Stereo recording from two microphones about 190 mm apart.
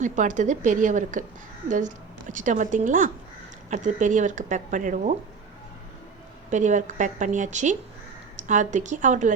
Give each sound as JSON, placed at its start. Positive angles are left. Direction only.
{"t": 0.0, "sound": "a woman's voice", "side_deg": -40}
{"t": 2.3, "sound": "a woman's voice", "side_deg": -40}
{"t": 6.5, "sound": "a woman's voice", "side_deg": -40}